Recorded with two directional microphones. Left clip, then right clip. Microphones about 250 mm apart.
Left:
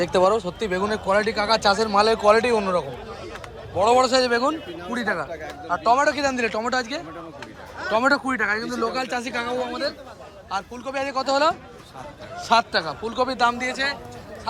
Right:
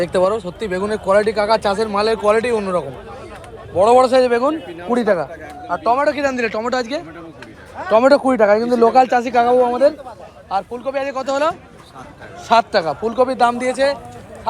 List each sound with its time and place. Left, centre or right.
0.0 s speech: centre
3.8 s speech: centre
8.3 s speech: centre
9.0 s speech: centre